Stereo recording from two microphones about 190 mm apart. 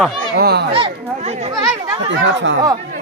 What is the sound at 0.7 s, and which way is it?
Chatter, 30° right (ahead or behind).